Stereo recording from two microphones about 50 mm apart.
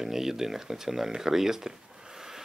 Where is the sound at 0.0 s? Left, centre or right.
Centre.